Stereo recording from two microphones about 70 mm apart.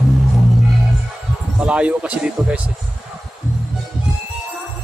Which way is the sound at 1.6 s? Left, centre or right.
Centre.